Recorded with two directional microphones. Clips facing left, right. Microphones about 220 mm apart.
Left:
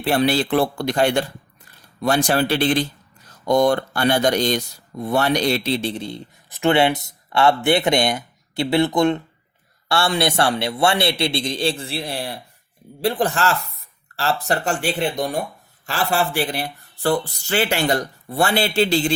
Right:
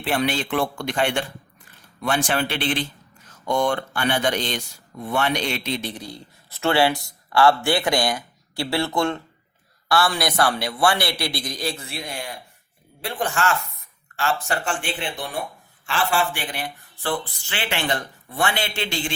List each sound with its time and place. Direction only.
0.0 s a man's voice: 40° left (ahead or behind)